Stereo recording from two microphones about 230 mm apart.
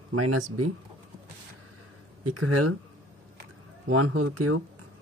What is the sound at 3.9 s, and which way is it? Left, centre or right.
Speech, right.